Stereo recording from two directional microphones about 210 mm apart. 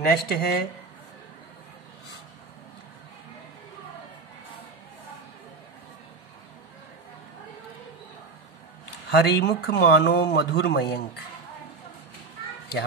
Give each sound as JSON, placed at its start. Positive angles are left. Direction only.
{"t": 0.0, "sound": "speech", "side_deg": 45}
{"t": 9.1, "sound": "speech", "side_deg": 50}